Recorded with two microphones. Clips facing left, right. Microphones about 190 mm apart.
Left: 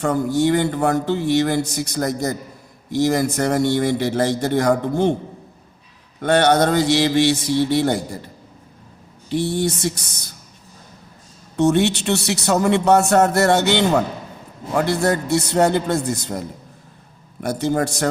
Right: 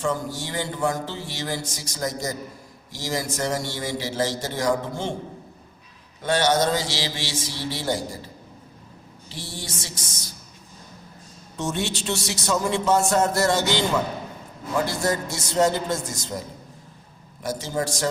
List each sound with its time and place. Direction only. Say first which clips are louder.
0.0 s a man's voice: left 9 dB; 60° left (ahead or behind)
6.2 s a man's voice: left 6 dB; 60° left (ahead or behind)
9.3 s a man's voice: left 16 dB; 60° left (ahead or behind)
11.5 s a man's voice: left 11 dB; 65° left (ahead or behind)
17.4 s a man's voice: left 7 dB; 60° left (ahead or behind)